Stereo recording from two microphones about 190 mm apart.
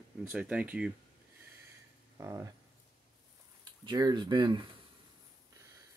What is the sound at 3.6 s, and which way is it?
Speech, 20° right (ahead or behind).